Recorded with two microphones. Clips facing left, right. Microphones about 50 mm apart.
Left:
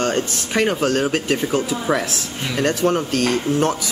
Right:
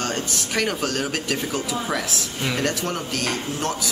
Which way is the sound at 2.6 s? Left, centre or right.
Left.